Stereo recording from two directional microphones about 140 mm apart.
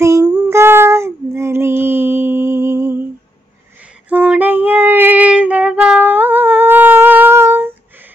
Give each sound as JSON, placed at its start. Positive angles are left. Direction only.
{"t": 0.0, "sound": "female singing", "side_deg": -20}
{"t": 4.1, "sound": "female singing", "side_deg": -10}